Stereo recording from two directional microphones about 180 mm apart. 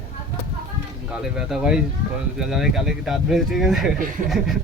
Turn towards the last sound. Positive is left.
turn(degrees=0)  # may be behind; listen again after turning